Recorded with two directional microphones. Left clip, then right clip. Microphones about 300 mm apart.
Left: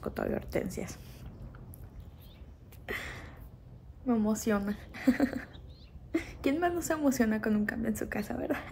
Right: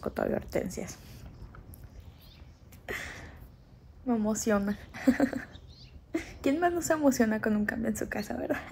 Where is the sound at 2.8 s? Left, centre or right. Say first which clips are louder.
Right 1 dB; centre.